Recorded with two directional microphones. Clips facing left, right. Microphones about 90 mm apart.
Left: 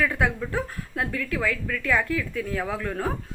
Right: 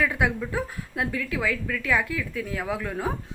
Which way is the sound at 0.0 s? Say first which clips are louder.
Even; 15° right (ahead or behind).